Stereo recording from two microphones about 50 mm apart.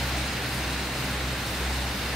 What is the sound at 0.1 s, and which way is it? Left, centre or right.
Vehicle, centre.